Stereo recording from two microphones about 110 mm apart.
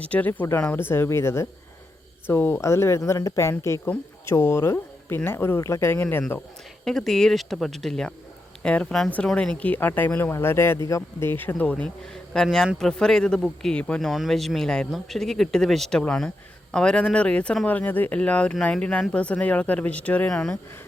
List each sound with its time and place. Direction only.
0.0 s speech: 15° left (ahead or behind)
6.8 s speech: 5° left (ahead or behind)